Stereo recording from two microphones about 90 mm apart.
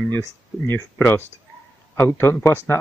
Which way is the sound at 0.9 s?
25° left (ahead or behind).